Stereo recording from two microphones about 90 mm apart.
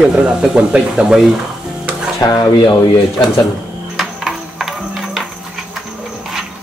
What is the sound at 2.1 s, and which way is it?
Speech, 45° left (ahead or behind).